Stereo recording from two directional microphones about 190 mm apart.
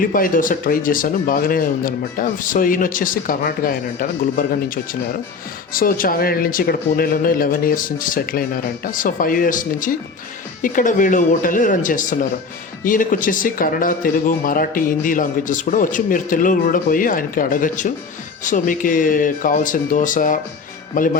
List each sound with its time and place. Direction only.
0.0 s speech: 45° left (ahead or behind)